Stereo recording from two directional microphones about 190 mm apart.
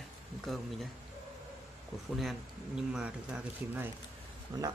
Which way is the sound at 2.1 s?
Centre (ahead or behind).